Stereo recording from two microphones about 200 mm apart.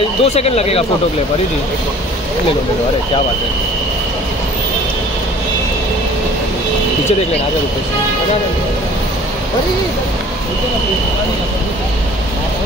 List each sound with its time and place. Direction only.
0.2 s speech: 30° left (ahead or behind)